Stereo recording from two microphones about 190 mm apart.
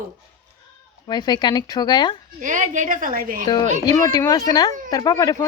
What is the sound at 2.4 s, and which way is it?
A woman's voice, 45° right (ahead or behind).